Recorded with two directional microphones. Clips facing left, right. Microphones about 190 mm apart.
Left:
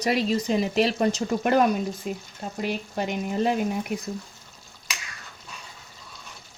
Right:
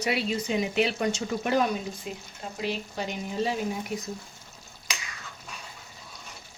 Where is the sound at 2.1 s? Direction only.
45° left (ahead or behind).